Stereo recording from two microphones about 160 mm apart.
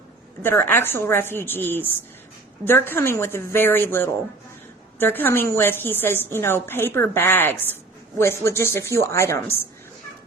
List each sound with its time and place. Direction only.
0.4 s a woman's voice: 15° left (ahead or behind)